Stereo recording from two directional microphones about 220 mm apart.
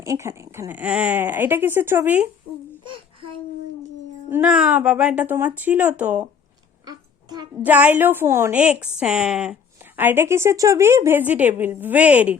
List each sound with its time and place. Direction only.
0.0 s a woman's voice: 15° right (ahead or behind)
2.8 s babbling: 25° right (ahead or behind)
4.3 s a woman's voice: 5° right (ahead or behind)
6.8 s a sound: 20° right (ahead or behind)
7.6 s a woman's voice: 5° right (ahead or behind)